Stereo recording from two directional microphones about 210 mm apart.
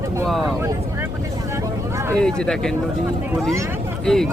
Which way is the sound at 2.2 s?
5° left (ahead or behind).